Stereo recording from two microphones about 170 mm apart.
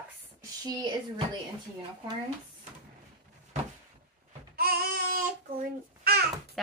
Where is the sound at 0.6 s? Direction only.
25° right (ahead or behind).